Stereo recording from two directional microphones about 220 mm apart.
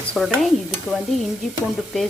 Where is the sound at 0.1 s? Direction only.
Centre (ahead or behind).